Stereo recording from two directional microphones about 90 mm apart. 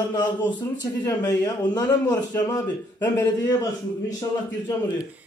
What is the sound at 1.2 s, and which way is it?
A man's voice, 40° left (ahead or behind).